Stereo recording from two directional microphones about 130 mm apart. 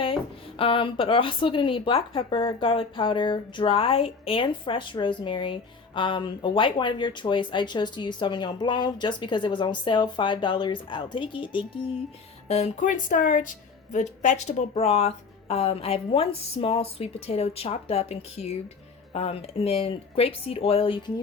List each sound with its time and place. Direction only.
0.6 s speech: 40° left (ahead or behind)
12.5 s a woman's voice: 55° left (ahead or behind)